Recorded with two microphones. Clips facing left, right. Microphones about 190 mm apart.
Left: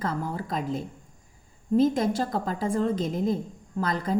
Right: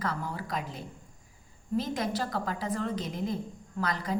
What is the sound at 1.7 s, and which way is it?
A woman's voice, 50° left (ahead or behind).